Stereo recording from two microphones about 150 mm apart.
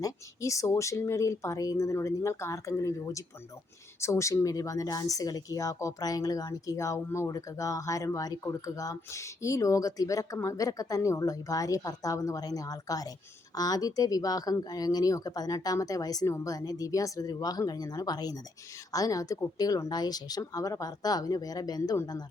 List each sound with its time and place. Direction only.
0.0 s speech: 20° left (ahead or behind)